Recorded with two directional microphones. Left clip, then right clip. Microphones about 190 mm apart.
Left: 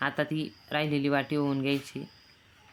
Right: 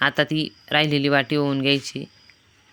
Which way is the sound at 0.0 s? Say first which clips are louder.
Right 9 dB; 25° right (ahead or behind).